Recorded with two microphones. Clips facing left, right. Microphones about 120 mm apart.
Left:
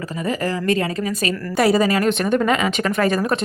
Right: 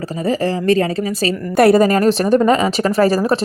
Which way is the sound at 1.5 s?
55° right (ahead or behind).